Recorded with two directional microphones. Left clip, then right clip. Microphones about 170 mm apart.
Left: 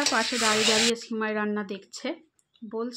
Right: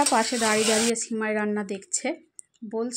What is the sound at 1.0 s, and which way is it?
Speech, 15° right (ahead or behind).